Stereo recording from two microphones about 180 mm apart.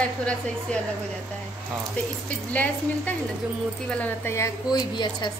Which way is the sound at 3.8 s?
10° left (ahead or behind).